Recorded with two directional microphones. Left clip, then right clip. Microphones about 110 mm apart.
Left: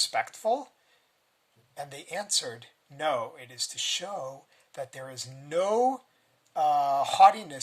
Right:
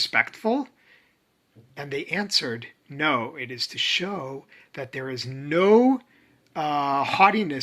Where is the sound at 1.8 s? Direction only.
50° left (ahead or behind).